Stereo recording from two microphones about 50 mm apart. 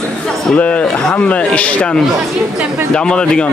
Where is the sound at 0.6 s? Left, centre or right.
Left.